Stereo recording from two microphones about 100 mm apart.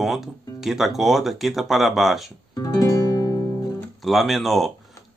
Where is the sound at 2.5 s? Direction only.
35° left (ahead or behind).